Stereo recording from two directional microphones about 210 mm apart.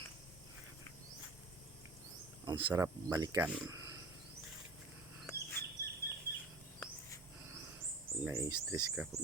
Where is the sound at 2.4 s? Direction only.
25° right (ahead or behind).